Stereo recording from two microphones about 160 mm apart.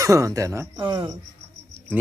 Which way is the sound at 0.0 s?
20° right (ahead or behind).